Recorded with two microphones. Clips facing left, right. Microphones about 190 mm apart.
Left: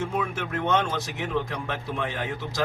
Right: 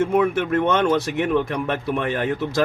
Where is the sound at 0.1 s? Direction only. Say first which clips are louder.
Right 10 dB; 65° right (ahead or behind).